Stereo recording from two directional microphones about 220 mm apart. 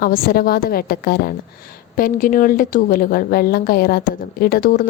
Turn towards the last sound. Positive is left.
turn(degrees=40)  # may be behind; listen again after turning